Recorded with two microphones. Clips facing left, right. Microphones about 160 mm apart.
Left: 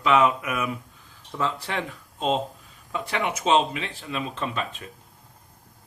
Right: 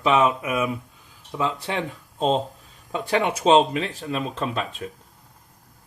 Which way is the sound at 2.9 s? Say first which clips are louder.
Right 5 dB; 35° right (ahead or behind).